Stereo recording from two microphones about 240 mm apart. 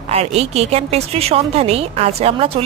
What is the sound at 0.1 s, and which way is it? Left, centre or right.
Speech, right.